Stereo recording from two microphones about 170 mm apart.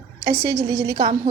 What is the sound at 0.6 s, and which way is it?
Speech, 80° right.